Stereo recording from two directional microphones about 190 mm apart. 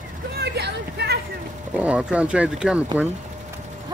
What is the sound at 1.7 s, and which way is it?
Speech, 5° right (ahead or behind).